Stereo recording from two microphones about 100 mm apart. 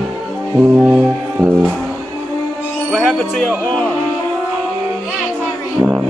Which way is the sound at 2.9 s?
10° right (ahead or behind).